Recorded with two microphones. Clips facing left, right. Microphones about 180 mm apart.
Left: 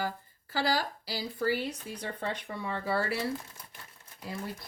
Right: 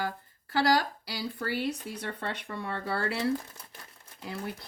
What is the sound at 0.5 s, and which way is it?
Speech, 70° right (ahead or behind).